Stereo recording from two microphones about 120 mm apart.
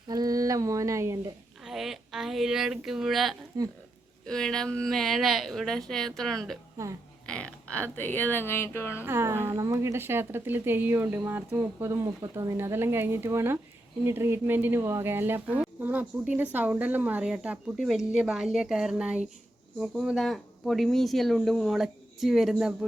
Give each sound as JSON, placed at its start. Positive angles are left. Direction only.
{"t": 0.1, "sound": "a sound", "side_deg": -30}
{"t": 1.6, "sound": "speech", "side_deg": 0}
{"t": 3.6, "sound": "speech", "side_deg": -30}
{"t": 4.3, "sound": "speech", "side_deg": 5}
{"t": 6.8, "sound": "speech", "side_deg": -25}
{"t": 7.3, "sound": "speech", "side_deg": 10}
{"t": 9.0, "sound": "speech", "side_deg": -20}